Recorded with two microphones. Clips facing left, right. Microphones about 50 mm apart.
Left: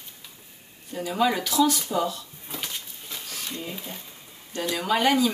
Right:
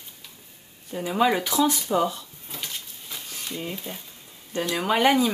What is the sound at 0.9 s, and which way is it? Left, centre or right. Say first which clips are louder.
Speech: right 2 dB; centre.